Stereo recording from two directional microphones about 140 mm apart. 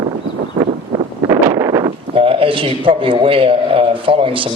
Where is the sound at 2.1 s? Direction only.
40° right (ahead or behind).